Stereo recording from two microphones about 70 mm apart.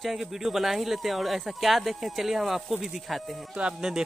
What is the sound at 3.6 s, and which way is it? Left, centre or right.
Speech, centre.